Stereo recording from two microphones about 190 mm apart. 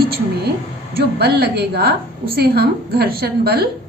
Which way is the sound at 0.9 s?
55° right (ahead or behind).